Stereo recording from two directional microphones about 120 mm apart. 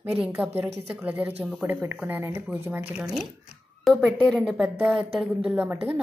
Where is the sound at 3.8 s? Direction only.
5° left (ahead or behind).